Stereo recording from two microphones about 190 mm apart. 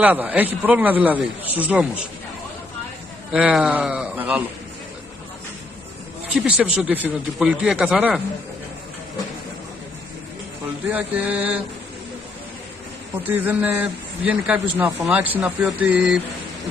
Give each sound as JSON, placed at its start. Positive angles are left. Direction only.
{"t": 0.0, "sound": "a man's voice", "side_deg": -10}
{"t": 3.3, "sound": "a man's voice", "side_deg": -5}
{"t": 6.3, "sound": "speech", "side_deg": -5}
{"t": 10.9, "sound": "a man's voice", "side_deg": -10}
{"t": 13.2, "sound": "a man's voice", "side_deg": -10}